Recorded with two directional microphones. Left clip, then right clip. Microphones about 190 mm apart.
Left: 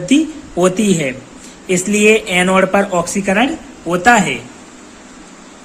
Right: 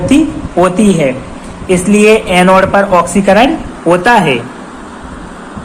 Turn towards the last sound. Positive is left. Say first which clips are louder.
# right 4 dB
turn(degrees=20)  # may be behind; listen again after turning